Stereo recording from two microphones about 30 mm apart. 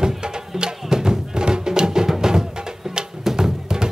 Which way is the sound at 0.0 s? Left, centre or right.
Right.